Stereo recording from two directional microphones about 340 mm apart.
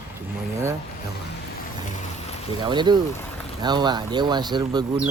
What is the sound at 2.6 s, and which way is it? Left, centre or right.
Speech, centre.